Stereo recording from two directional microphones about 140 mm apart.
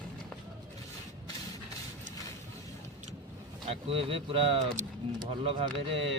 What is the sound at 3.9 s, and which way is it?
Speech, 40° right (ahead or behind).